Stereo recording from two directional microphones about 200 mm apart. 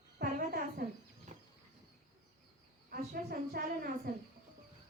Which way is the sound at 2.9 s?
50° right (ahead or behind).